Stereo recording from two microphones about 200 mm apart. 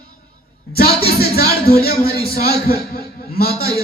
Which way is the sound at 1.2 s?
50° left (ahead or behind).